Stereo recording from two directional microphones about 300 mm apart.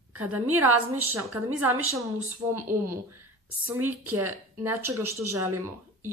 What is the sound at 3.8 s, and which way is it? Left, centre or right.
Speech, centre.